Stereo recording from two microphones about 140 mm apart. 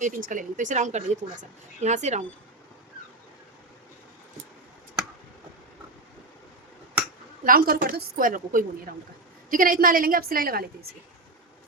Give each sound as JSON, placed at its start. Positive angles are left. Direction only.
{"t": 0.0, "sound": "speech", "side_deg": -70}
{"t": 7.4, "sound": "a woman's voice", "side_deg": -90}